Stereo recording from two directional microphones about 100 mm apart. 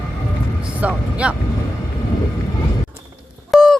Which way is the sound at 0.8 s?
10° right (ahead or behind).